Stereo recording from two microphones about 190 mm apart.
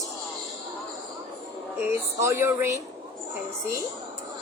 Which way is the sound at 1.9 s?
15° right (ahead or behind).